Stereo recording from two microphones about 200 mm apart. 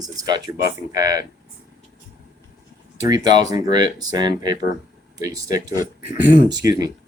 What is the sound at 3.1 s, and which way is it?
Speech, 20° right (ahead or behind).